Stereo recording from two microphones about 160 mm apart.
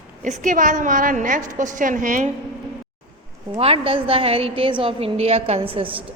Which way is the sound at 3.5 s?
35° right (ahead or behind).